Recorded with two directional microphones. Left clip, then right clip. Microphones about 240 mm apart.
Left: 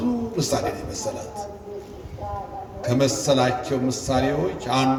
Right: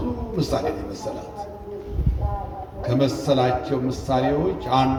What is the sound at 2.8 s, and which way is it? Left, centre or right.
A man's voice, left.